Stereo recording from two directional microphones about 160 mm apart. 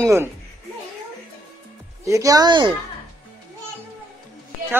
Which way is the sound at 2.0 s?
20° right (ahead or behind).